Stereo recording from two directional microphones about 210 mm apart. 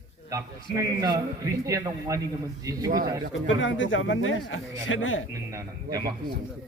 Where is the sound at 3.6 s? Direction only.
65° left (ahead or behind).